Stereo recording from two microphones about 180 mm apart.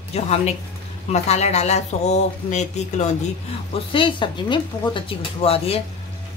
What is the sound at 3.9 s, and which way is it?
A woman's voice, 25° left (ahead or behind).